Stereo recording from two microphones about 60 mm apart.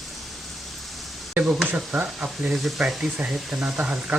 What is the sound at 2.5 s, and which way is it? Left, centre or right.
Speech, centre.